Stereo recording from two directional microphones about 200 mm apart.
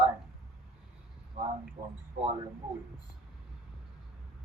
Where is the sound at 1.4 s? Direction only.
30° right (ahead or behind).